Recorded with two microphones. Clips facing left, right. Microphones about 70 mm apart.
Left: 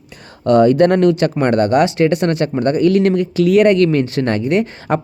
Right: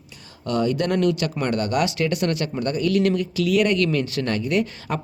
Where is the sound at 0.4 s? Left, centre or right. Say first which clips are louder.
Left 12 dB; left.